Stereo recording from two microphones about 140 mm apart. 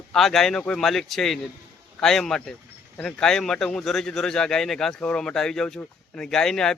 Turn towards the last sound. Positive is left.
turn(degrees=5)  # may be behind; listen again after turning